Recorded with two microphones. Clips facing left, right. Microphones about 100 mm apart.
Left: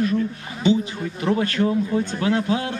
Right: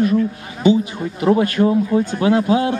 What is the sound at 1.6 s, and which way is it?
Speech, 35° right (ahead or behind).